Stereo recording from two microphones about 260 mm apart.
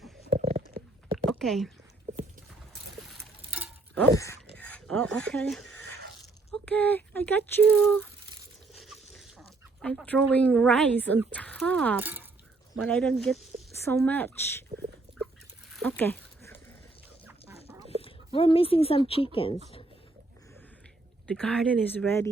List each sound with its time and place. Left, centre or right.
0.3 s a sound: right
1.3 s speech: centre
2.9 s a sound: centre
3.9 s speech: centre
4.5 s filing: centre
6.5 s speech: centre
8.7 s dog: centre
10.3 s speech: centre
11.9 s speech: centre
15.7 s a sound: centre
17.2 s dog: centre
18.0 s speech: left
21.2 s speech: centre